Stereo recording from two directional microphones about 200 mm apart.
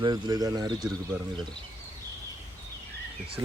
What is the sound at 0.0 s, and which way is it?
Speech, 20° right (ahead or behind).